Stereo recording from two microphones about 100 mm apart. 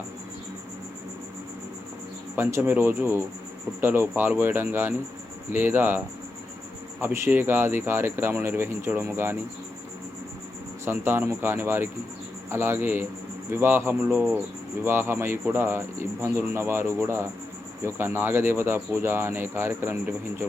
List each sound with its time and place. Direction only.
2.3 s speech: 20° right (ahead or behind)
7.0 s speech: 20° right (ahead or behind)
10.8 s speech: 20° right (ahead or behind)